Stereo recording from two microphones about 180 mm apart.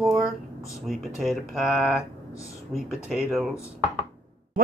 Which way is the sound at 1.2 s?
Centre (ahead or behind).